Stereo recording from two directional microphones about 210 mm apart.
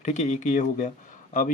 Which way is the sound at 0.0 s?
35° left (ahead or behind).